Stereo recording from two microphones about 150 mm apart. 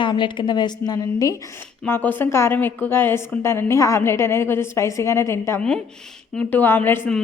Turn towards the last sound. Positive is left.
turn(degrees=15)  # may be behind; listen again after turning